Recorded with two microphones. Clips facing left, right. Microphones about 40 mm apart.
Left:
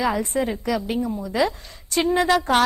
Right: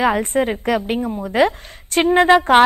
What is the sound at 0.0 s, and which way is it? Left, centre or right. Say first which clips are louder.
A woman's voice: right 5 dB; right.